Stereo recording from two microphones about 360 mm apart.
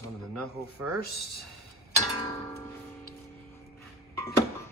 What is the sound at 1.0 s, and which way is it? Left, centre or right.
Speech, left.